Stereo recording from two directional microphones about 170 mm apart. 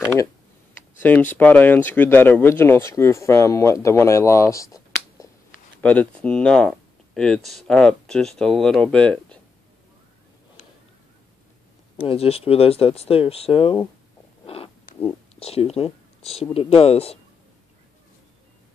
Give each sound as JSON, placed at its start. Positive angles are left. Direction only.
{"t": 1.0, "sound": "speech", "side_deg": 10}
{"t": 5.8, "sound": "speech", "side_deg": 5}
{"t": 12.0, "sound": "speech", "side_deg": 35}
{"t": 14.4, "sound": "a sound", "side_deg": 35}
{"t": 15.3, "sound": "speech", "side_deg": 35}